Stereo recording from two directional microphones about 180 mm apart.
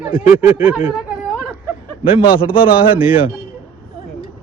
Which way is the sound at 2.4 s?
30° left (ahead or behind).